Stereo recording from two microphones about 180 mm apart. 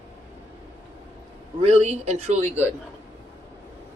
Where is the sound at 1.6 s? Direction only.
35° right (ahead or behind).